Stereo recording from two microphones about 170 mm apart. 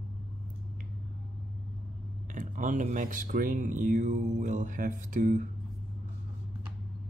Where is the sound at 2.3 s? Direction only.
50° right (ahead or behind).